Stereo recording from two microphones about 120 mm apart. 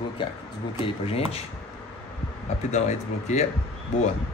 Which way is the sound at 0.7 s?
50° left (ahead or behind).